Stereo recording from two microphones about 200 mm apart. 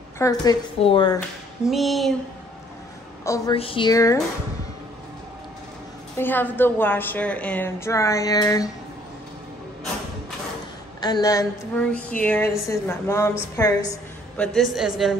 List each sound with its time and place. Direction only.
0.2 s speech: 20° left (ahead or behind)
1.7 s a woman's voice: centre (ahead or behind)
3.5 s speech: 25° left (ahead or behind)
6.1 s a woman's voice: 10° left (ahead or behind)
11.0 s speech: 20° left (ahead or behind)
11.7 s a woman's voice: 5° left (ahead or behind)
14.3 s a woman's voice: 5° left (ahead or behind)